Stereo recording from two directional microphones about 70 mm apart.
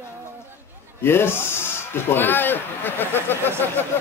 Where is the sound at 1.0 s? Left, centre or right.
Left.